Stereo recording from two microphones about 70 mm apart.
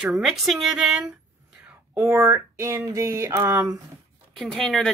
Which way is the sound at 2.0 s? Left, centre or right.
Right.